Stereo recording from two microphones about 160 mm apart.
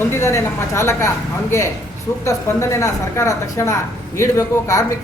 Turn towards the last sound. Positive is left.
turn(degrees=20)  # may be behind; listen again after turning